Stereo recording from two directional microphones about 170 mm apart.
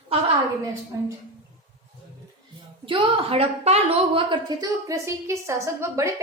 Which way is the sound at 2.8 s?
30° right (ahead or behind).